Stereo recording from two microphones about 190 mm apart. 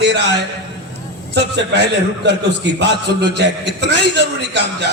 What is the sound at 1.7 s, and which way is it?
A man's voice, 65° right (ahead or behind).